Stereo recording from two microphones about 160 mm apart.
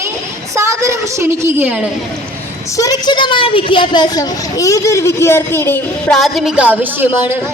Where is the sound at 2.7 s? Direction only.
20° left (ahead or behind).